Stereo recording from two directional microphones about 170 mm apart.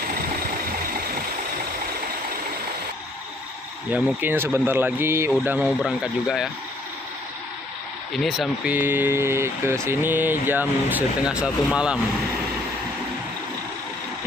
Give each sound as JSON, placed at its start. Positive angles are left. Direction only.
{"t": 3.9, "sound": "speech", "side_deg": -10}
{"t": 8.1, "sound": "speech", "side_deg": 0}